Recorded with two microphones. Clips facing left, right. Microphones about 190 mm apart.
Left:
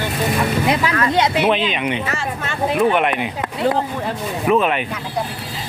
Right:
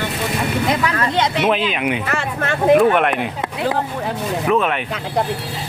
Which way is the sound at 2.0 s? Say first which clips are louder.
Right 3 dB; 60° right (ahead or behind).